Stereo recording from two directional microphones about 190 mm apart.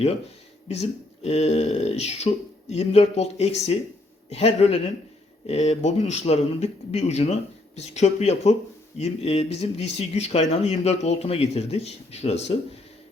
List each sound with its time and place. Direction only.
0.7 s speech: 35° left (ahead or behind)